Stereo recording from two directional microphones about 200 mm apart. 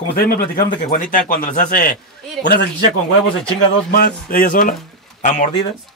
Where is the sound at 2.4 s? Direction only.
55° left (ahead or behind).